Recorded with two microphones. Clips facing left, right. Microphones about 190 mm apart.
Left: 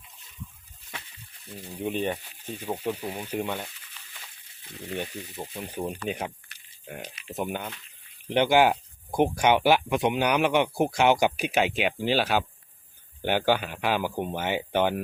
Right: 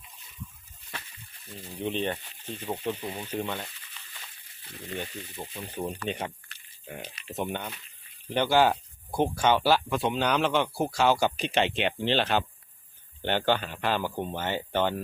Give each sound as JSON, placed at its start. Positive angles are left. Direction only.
{"t": 1.5, "sound": "speech", "side_deg": 10}
{"t": 4.9, "sound": "speech", "side_deg": 15}